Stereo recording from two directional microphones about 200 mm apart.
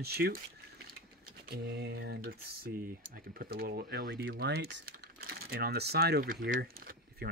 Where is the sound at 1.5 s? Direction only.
55° right (ahead or behind).